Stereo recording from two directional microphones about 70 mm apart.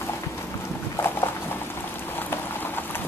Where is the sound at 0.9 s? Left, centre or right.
Left.